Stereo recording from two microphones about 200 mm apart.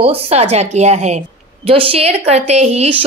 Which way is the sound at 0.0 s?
30° right (ahead or behind).